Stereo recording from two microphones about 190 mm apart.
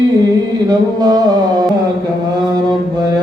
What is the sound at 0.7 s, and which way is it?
Music, 20° right (ahead or behind).